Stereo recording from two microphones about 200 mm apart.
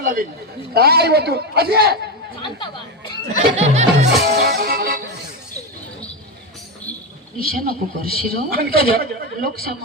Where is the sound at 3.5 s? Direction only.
35° right (ahead or behind).